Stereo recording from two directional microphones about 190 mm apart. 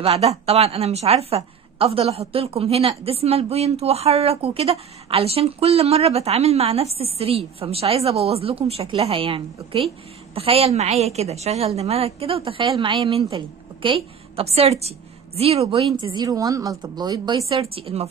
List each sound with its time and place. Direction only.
0.0 s a woman's voice: 35° right (ahead or behind)